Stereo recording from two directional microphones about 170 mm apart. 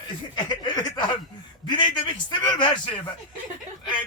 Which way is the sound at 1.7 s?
25° left (ahead or behind).